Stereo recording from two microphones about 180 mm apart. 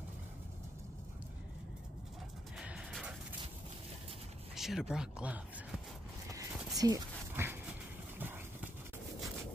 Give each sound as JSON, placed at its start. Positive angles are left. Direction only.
{"t": 2.5, "sound": "music", "side_deg": -5}
{"t": 4.6, "sound": "speech", "side_deg": 0}
{"t": 6.3, "sound": "dog", "side_deg": -20}
{"t": 8.2, "sound": "horse", "side_deg": -10}